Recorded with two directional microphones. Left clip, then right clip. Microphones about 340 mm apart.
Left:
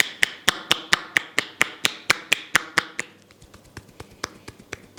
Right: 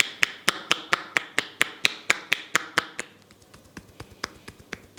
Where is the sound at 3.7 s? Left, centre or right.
Centre.